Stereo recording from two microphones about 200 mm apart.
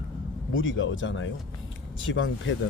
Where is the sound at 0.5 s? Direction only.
75° left (ahead or behind).